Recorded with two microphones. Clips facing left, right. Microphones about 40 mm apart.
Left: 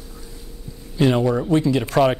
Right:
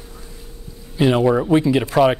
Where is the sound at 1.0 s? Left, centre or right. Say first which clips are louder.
Right 2 dB; centre.